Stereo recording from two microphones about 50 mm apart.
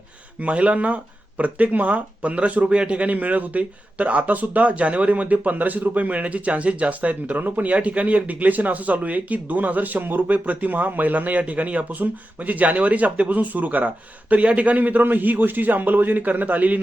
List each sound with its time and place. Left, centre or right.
0.3 s a man's voice: right